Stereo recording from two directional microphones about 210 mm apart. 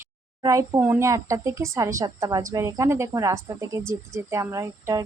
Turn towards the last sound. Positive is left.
turn(degrees=-15)  # may be behind; listen again after turning